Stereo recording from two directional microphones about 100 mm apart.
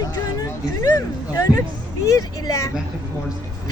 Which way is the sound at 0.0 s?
40° left (ahead or behind).